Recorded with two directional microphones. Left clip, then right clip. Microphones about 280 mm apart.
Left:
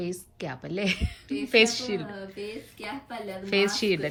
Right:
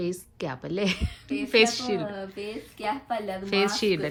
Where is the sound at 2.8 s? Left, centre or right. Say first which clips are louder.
Right 8 dB; right.